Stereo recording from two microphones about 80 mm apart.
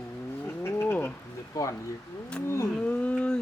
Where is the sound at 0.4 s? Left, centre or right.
Left.